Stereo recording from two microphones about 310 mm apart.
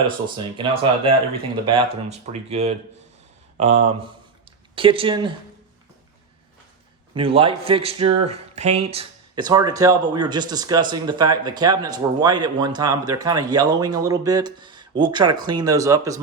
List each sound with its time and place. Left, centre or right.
0.3 s speech: centre
7.1 s speech: centre